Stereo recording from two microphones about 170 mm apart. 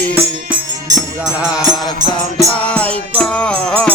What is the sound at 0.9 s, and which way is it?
Music, 5° right (ahead or behind).